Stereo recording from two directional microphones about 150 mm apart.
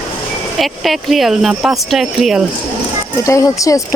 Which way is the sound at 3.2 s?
20° left (ahead or behind).